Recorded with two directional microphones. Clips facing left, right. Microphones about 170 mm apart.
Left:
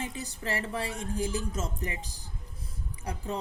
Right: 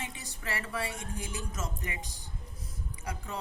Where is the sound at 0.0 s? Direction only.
35° left (ahead or behind).